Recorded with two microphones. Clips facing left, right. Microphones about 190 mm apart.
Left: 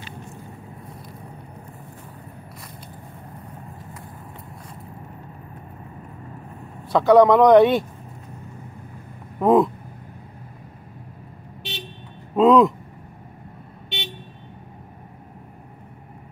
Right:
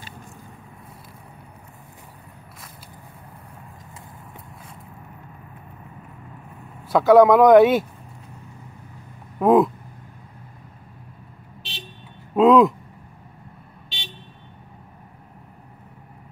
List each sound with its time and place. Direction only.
6.9 s speech: centre (ahead or behind)
9.4 s speech: centre (ahead or behind)
12.4 s speech: centre (ahead or behind)
13.8 s vehicle: 60° left (ahead or behind)